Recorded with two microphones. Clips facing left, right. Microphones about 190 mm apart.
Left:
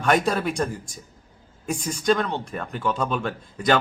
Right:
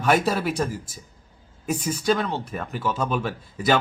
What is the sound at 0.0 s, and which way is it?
A man's voice, 5° right (ahead or behind).